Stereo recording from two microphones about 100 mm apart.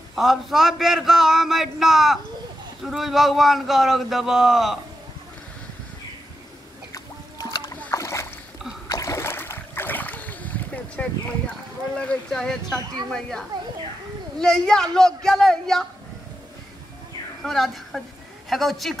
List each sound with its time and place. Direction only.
0.1 s a man's voice: 5° right (ahead or behind)
6.9 s boat: 35° left (ahead or behind); by 11.5 s 15° left (ahead or behind)
12.0 s a man's voice: 10° left (ahead or behind)
17.4 s a woman's voice: centre (ahead or behind)